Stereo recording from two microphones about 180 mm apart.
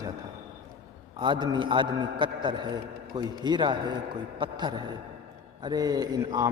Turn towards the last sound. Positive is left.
turn(degrees=-20)  # may be behind; listen again after turning